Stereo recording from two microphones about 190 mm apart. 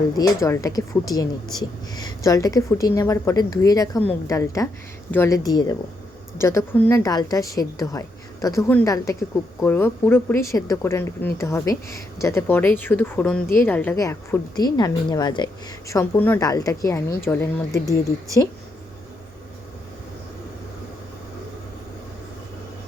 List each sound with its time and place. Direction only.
0.2 s a woman's voice: 15° left (ahead or behind)